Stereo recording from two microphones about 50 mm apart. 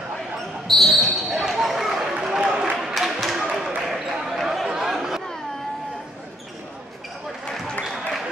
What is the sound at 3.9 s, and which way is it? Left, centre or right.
Basketball bounce, centre.